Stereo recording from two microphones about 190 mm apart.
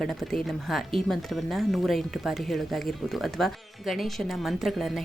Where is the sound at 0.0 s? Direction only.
Centre (ahead or behind).